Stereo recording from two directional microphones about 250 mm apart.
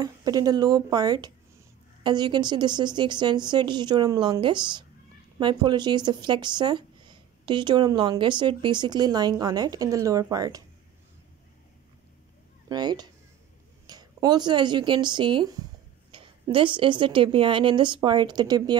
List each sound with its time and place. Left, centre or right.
0.0 s speech: centre
12.6 s a woman's voice: centre